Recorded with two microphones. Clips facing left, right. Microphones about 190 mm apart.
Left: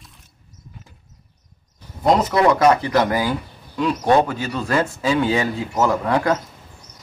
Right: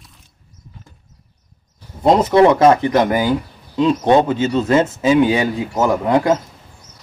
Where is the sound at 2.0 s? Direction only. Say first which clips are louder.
Right 5 dB; 25° right (ahead or behind).